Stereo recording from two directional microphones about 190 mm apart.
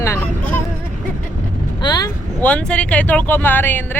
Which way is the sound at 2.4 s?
5° left (ahead or behind).